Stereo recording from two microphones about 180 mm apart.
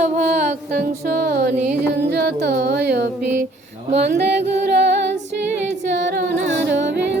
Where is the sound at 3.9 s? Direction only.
35° right (ahead or behind).